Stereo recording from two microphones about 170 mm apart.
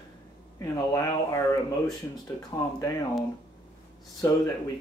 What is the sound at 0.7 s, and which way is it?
Speech, 20° left (ahead or behind).